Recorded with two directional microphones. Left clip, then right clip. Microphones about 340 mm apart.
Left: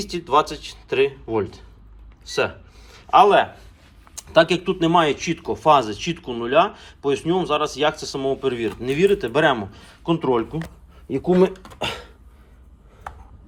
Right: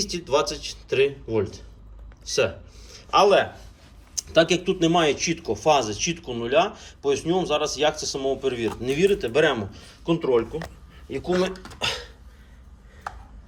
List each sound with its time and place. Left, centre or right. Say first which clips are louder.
0.1 s speech: left 7 dB; centre
11.1 s speech: left 6 dB; centre